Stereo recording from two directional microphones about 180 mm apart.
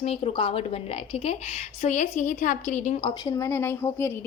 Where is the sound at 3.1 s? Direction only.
25° left (ahead or behind).